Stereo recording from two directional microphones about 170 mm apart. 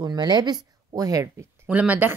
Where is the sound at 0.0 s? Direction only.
25° right (ahead or behind).